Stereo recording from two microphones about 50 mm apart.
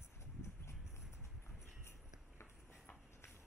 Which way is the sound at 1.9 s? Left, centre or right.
Left.